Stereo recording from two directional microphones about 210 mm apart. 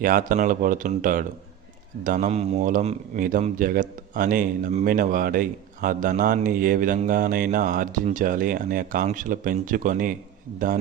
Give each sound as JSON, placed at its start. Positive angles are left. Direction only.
{"t": 0.0, "sound": "a man's voice", "side_deg": -40}